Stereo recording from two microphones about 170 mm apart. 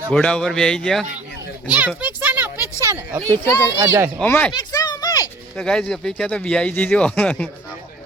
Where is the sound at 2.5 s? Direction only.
20° left (ahead or behind).